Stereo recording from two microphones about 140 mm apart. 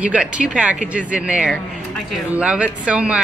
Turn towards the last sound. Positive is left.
turn(degrees=-10)  # may be behind; listen again after turning